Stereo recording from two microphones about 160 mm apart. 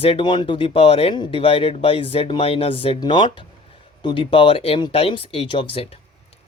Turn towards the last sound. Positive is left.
turn(degrees=35)  # may be behind; listen again after turning